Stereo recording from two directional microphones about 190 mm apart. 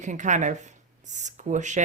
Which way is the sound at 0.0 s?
40° right (ahead or behind).